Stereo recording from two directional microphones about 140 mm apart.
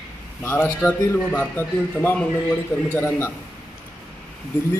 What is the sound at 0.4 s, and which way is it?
A man's voice, 15° left (ahead or behind).